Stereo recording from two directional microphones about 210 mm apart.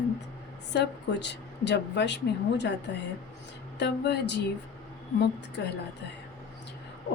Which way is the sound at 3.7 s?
55° left (ahead or behind).